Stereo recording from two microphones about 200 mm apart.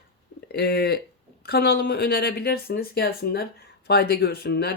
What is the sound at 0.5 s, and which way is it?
Speech, 50° left (ahead or behind).